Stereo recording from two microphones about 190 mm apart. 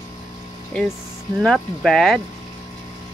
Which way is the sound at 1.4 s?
Centre (ahead or behind).